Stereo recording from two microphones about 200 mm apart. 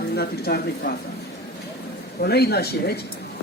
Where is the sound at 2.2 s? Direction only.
55° left (ahead or behind).